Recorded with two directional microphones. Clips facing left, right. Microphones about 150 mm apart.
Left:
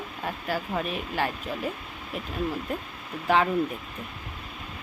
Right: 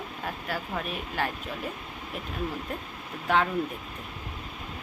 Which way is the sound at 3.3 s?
Centre (ahead or behind).